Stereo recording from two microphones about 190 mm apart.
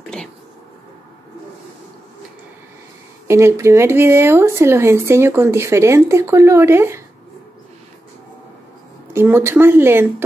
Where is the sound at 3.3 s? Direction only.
15° right (ahead or behind).